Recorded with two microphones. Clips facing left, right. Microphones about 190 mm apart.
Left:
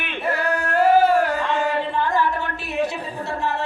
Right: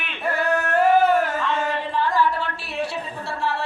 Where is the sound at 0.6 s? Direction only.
35° left (ahead or behind).